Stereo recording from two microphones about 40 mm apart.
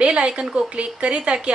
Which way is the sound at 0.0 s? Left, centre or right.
Right.